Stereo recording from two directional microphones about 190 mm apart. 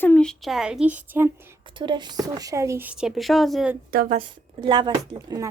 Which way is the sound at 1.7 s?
25° right (ahead or behind).